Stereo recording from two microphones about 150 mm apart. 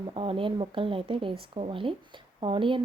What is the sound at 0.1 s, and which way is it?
A woman's voice, 35° right (ahead or behind).